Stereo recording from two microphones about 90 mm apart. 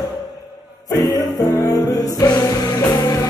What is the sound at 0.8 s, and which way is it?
Music, 40° left (ahead or behind).